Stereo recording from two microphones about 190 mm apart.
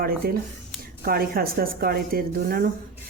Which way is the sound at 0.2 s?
55° right (ahead or behind).